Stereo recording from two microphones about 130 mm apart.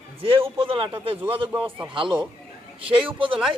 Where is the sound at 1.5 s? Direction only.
15° right (ahead or behind).